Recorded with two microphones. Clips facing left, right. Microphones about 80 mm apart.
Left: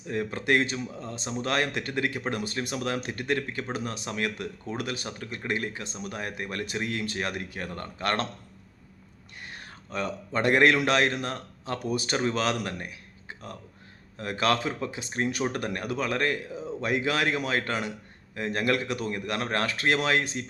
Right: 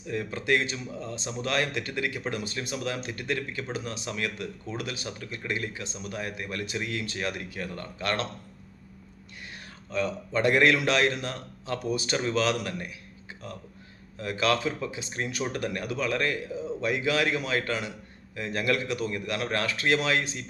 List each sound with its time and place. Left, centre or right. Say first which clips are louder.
0.1 s speech: left 1 dB; left
9.5 s a sound: right 1 dB; left
10.3 s speech: left 1 dB; left
14.2 s speech: even; left